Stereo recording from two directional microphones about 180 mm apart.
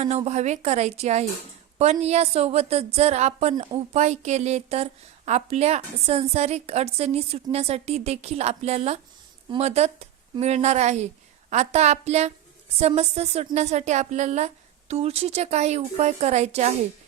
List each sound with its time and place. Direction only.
0.3 s a woman's voice: 40° right (ahead or behind)